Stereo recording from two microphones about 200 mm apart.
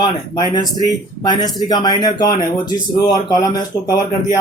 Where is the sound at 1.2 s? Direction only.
20° left (ahead or behind).